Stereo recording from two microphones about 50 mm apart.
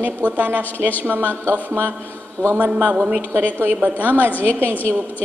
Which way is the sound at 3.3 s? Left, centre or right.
Right.